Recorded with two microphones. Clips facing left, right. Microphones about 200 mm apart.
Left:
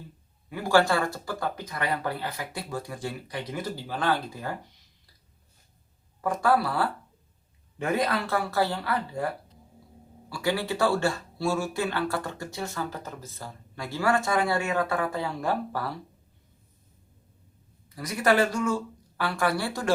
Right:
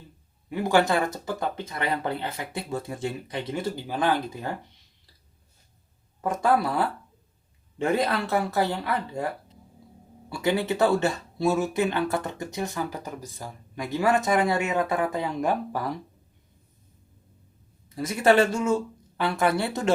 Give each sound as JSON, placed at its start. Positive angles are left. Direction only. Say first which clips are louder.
{"t": 0.5, "sound": "speech", "louder": "right 1 dB", "side_deg": -20}
{"t": 3.8, "sound": "speech", "louder": "right 2 dB", "side_deg": -15}
{"t": 6.2, "sound": "speech", "louder": "right 1 dB", "side_deg": -20}
{"t": 10.2, "sound": "speech", "louder": "right 3 dB", "side_deg": -20}
{"t": 17.8, "sound": "speech", "louder": "right 4 dB", "side_deg": -25}